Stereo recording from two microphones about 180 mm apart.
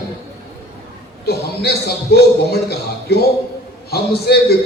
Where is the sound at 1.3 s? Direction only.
65° left (ahead or behind).